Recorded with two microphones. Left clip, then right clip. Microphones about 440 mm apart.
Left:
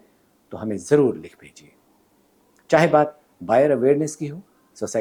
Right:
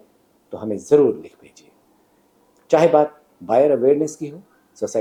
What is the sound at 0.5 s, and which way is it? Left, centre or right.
Speech, left.